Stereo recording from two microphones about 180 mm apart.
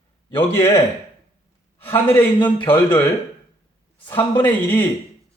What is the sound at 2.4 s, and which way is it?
Speech, 25° left (ahead or behind).